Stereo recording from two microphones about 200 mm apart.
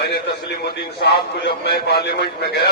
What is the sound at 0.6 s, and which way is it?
A man's voice, 55° left (ahead or behind).